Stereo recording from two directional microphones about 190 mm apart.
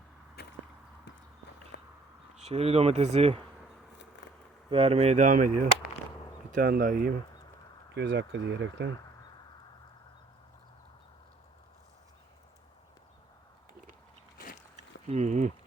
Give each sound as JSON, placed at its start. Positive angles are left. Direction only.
{"t": 0.4, "sound": "whip", "side_deg": 60}
{"t": 1.7, "sound": "a sound", "side_deg": 65}
{"t": 2.3, "sound": "speech", "side_deg": -35}
{"t": 4.7, "sound": "speech", "side_deg": -30}
{"t": 7.9, "sound": "speech", "side_deg": -70}
{"t": 15.0, "sound": "speech", "side_deg": -35}